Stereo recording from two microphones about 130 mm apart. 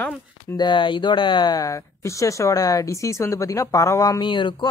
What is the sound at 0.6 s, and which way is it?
Speech, 40° left (ahead or behind).